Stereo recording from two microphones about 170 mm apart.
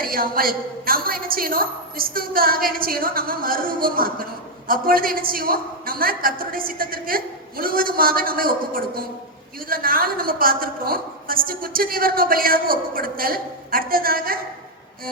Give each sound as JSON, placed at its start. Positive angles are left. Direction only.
{"t": 0.0, "sound": "a woman's voice", "side_deg": -60}